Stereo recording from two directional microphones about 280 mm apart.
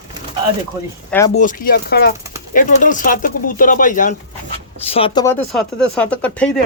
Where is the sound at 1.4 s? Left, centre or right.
Left; by 6.6 s centre.